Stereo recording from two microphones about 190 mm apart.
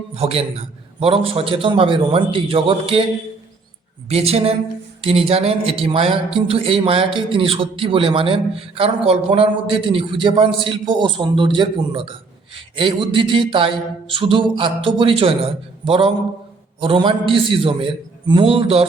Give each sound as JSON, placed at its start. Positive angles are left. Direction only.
{"t": 0.2, "sound": "a woman's voice", "side_deg": -30}
{"t": 4.1, "sound": "a woman's voice", "side_deg": -30}